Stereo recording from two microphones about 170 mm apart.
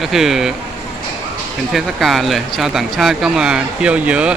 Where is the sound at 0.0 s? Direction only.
Centre (ahead or behind).